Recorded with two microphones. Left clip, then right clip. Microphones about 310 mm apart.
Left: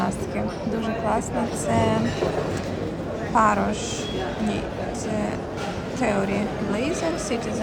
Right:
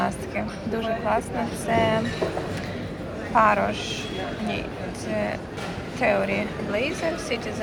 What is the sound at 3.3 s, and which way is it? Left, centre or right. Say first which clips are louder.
Speech: right 1 dB; centre.